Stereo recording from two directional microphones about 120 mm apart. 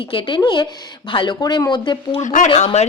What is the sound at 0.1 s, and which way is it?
A woman's voice, 40° left (ahead or behind).